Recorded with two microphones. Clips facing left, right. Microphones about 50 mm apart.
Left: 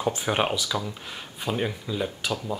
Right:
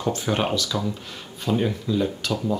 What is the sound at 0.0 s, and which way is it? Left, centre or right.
Speech, centre.